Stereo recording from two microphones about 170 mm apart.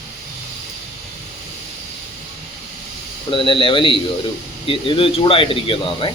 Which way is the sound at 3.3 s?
30° left (ahead or behind).